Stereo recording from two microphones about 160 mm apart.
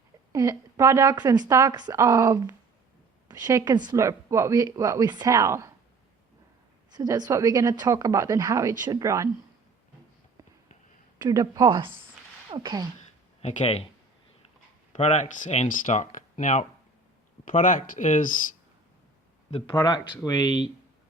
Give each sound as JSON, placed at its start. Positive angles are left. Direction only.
{"t": 0.3, "sound": "speech", "side_deg": -20}
{"t": 6.9, "sound": "speech", "side_deg": -25}
{"t": 11.2, "sound": "speech", "side_deg": -20}
{"t": 12.5, "sound": "a sound", "side_deg": -30}
{"t": 13.4, "sound": "speech", "side_deg": 45}
{"t": 14.9, "sound": "speech", "side_deg": 50}
{"t": 19.7, "sound": "speech", "side_deg": 25}